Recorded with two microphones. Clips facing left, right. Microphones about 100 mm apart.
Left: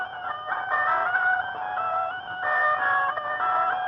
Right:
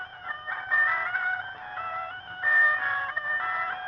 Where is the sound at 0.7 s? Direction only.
40° left (ahead or behind).